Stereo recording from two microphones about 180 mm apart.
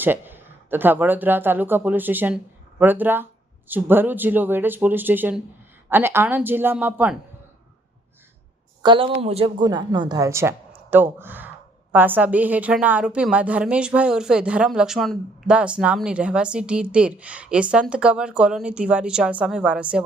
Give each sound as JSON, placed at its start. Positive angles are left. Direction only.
{"t": 0.0, "sound": "a woman's voice", "side_deg": -10}
{"t": 8.8, "sound": "a woman's voice", "side_deg": -30}